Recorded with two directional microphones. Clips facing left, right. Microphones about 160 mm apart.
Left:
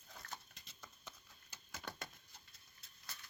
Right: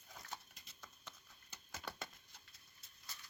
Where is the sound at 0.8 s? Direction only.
5° left (ahead or behind).